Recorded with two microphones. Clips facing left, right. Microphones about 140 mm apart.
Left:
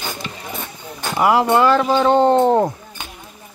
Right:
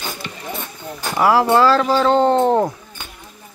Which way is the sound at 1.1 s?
20° left (ahead or behind).